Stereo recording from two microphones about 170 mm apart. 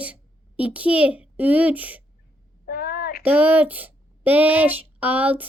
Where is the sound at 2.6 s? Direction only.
60° left (ahead or behind).